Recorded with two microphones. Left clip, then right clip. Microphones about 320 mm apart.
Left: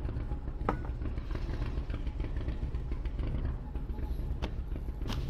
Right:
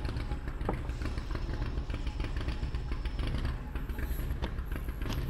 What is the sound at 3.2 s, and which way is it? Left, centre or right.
Vehicle, right.